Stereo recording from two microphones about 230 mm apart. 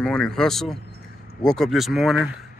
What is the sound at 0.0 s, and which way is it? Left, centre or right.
Speech, centre.